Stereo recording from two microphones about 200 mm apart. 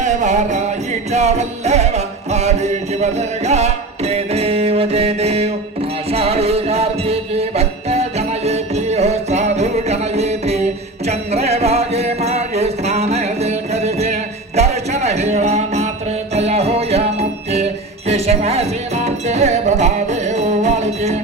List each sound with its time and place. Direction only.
0.0 s music: 35° right (ahead or behind)